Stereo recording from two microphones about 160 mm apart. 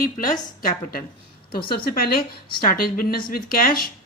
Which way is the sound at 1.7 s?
70° left (ahead or behind).